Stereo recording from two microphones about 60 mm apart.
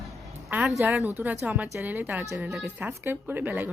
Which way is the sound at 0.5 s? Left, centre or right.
Right.